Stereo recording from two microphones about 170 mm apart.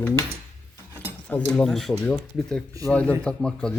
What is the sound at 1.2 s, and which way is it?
Speech, 5° left (ahead or behind).